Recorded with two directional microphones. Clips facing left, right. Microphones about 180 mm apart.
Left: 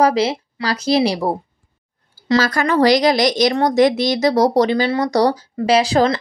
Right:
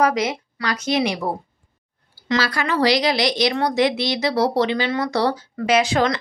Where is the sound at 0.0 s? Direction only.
30° left (ahead or behind).